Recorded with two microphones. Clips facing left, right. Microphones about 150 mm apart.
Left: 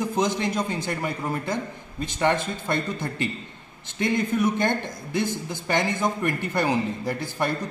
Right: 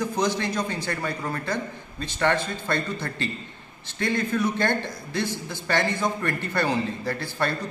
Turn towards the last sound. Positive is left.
turn(degrees=15)  # may be behind; listen again after turning